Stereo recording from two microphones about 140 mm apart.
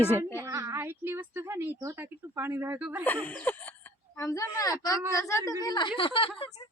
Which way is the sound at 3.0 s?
10° left (ahead or behind).